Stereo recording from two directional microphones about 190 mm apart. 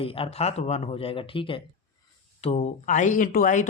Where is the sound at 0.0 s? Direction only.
30° left (ahead or behind).